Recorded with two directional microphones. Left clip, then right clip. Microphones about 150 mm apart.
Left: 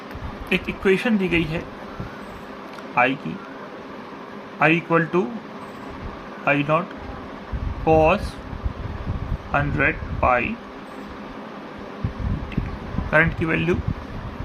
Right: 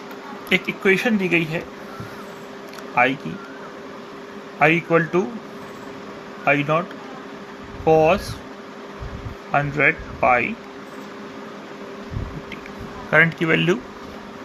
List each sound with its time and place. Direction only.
0.5 s speech: 20° right (ahead or behind)
2.9 s speech: 10° right (ahead or behind)
4.6 s speech: 10° right (ahead or behind)
6.4 s speech: 10° right (ahead or behind)
7.9 s speech: 10° right (ahead or behind)
9.5 s speech: 15° right (ahead or behind)
13.1 s speech: 30° right (ahead or behind)